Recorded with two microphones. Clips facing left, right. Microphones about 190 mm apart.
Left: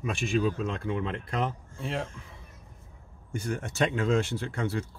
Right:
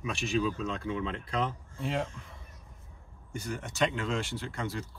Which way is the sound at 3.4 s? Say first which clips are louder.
Left 2 dB; 45° left (ahead or behind).